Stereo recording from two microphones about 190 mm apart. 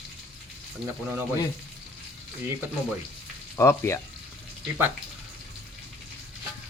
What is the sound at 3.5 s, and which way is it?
Speech, 10° left (ahead or behind).